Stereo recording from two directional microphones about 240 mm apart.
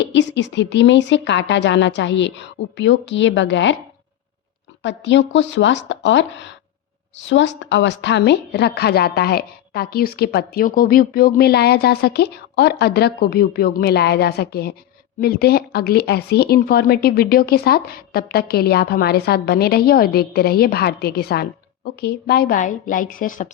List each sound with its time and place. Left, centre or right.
0.0 s speech: left
4.8 s a woman's voice: left